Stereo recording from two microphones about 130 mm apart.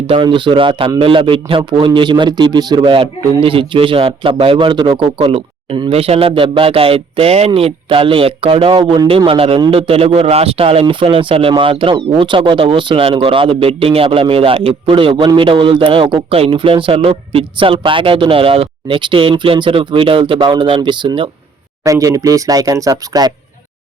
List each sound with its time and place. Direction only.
0.1 s speech: 40° right (ahead or behind)
8.8 s speech: 30° right (ahead or behind)
9.0 s speech: 40° right (ahead or behind)
21.8 s speech: 25° right (ahead or behind)